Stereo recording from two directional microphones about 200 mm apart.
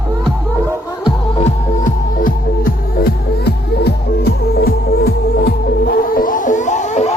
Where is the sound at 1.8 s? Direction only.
45° left (ahead or behind).